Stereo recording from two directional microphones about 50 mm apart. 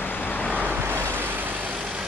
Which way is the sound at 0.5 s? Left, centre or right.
Right.